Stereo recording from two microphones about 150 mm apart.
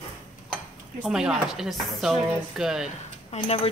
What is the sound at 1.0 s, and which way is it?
Speech, 5° right (ahead or behind).